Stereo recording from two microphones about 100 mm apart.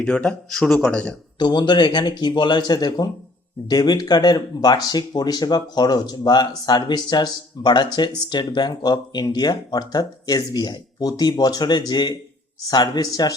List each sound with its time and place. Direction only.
0.0 s speech: 10° left (ahead or behind)
1.4 s speech: 45° left (ahead or behind)